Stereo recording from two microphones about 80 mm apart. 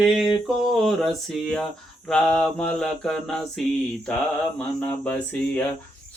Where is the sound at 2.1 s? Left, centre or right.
Centre.